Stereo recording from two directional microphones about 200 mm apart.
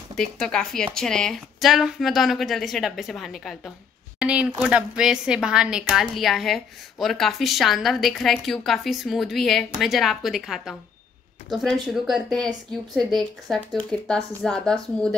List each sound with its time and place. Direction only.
0.1 s a woman's voice: 5° left (ahead or behind)